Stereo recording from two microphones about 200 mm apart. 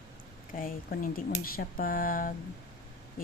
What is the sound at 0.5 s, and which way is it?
Speech, 45° left (ahead or behind).